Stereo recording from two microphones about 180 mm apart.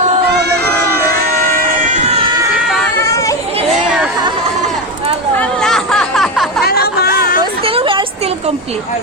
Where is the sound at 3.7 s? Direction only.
5° right (ahead or behind).